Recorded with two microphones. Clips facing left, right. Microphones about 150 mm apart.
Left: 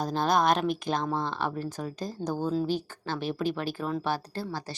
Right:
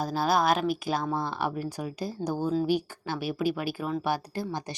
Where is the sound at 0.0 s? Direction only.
5° right (ahead or behind).